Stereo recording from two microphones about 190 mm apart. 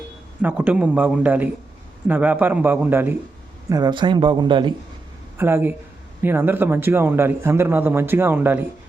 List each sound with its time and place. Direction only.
0.4 s a man's voice: 5° right (ahead or behind); by 4.7 s 25° right (ahead or behind)
5.4 s a man's voice: 10° right (ahead or behind)